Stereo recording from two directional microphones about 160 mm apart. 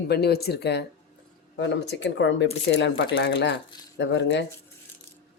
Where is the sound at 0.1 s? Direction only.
85° left.